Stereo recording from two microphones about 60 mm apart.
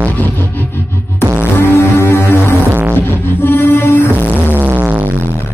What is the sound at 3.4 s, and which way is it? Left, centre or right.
Music, left.